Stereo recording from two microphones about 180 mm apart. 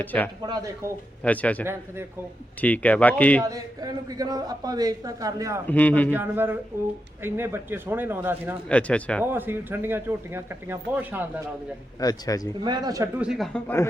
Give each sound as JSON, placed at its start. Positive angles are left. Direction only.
{"t": 0.0, "sound": "speech", "side_deg": 10}
{"t": 0.4, "sound": "a man's voice", "side_deg": -20}
{"t": 1.2, "sound": "speech", "side_deg": 10}
{"t": 3.4, "sound": "a man's voice", "side_deg": -20}
{"t": 5.6, "sound": "speech", "side_deg": 10}
{"t": 6.1, "sound": "speech", "side_deg": -10}
{"t": 8.7, "sound": "speech", "side_deg": 5}
{"t": 9.2, "sound": "speech", "side_deg": -10}
{"t": 11.9, "sound": "speech", "side_deg": 20}
{"t": 12.6, "sound": "a man's voice", "side_deg": -25}
{"t": 13.1, "sound": "speech", "side_deg": -5}